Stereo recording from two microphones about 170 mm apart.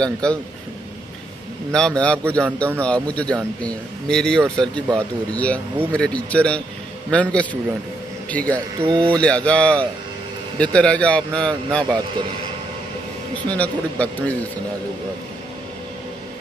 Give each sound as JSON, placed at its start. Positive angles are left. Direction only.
{"t": 0.0, "sound": "a man's voice", "side_deg": 5}
{"t": 1.7, "sound": "a man's voice", "side_deg": 5}
{"t": 8.8, "sound": "speech", "side_deg": -30}
{"t": 9.1, "sound": "speech", "side_deg": 5}
{"t": 13.5, "sound": "speech", "side_deg": 10}